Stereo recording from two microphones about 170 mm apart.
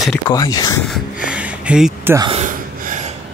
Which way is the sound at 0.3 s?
20° left (ahead or behind).